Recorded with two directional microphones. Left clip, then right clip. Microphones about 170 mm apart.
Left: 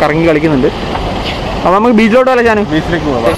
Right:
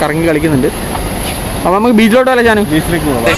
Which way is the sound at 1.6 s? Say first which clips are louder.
Left 2 dB; 20° right (ahead or behind).